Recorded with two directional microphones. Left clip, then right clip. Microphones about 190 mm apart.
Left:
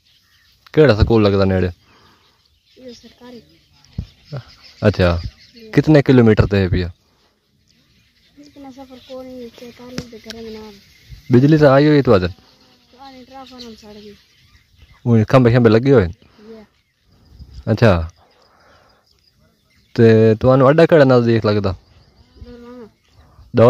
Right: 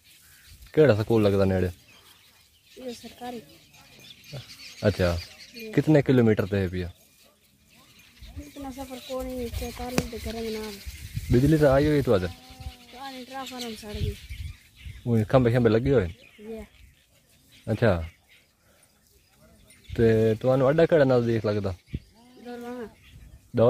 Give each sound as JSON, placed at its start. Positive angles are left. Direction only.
{"t": 0.7, "sound": "speech", "side_deg": 30}
{"t": 4.3, "sound": "speech", "side_deg": 30}
{"t": 9.6, "sound": "speech", "side_deg": -40}
{"t": 11.2, "sound": "speech", "side_deg": 30}
{"t": 12.9, "sound": "speech", "side_deg": -5}
{"t": 15.0, "sound": "speech", "side_deg": 30}
{"t": 17.6, "sound": "speech", "side_deg": 35}
{"t": 19.9, "sound": "speech", "side_deg": 35}